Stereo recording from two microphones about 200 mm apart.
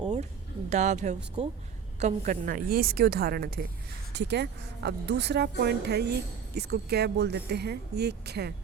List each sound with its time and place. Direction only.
0.7 s a woman's voice: 35° right (ahead or behind)
4.1 s speech: 60° right (ahead or behind)